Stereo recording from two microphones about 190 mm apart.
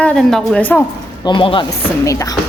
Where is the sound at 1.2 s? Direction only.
25° left (ahead or behind).